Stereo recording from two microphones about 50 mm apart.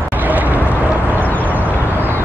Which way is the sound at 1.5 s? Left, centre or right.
Right.